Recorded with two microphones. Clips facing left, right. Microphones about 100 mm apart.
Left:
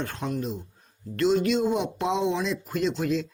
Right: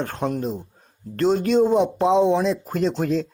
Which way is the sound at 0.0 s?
40° right (ahead or behind).